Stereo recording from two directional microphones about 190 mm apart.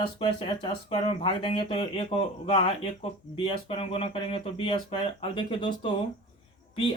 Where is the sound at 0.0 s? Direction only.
25° left (ahead or behind).